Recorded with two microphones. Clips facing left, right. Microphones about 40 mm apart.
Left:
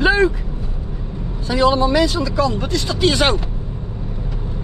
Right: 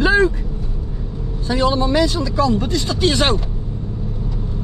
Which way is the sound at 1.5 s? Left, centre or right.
Left.